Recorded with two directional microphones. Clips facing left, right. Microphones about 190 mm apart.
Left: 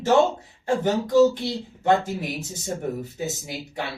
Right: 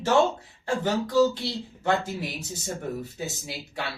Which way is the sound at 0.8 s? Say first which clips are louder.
Left 4 dB; 20° left (ahead or behind).